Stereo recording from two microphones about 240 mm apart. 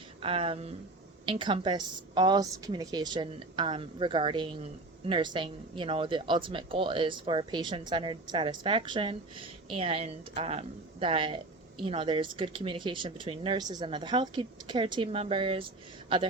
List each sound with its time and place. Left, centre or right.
0.2 s speech: right